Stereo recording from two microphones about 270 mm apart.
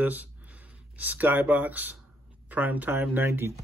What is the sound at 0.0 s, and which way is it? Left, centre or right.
Speech, centre.